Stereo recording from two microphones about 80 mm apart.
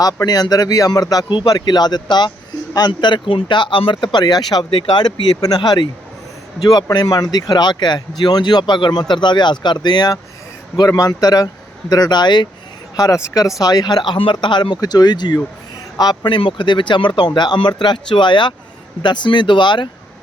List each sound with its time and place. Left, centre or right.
0.3 s speech: left
6.9 s speech: left
10.8 s speech: left
13.1 s speech: left
13.6 s speech: left
14.8 s speech: left
16.0 s speech: left
19.0 s speech: left